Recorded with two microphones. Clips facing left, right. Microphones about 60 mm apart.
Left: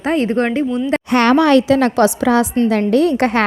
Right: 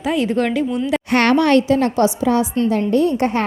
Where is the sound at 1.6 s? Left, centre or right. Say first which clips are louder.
Left 3 dB; left.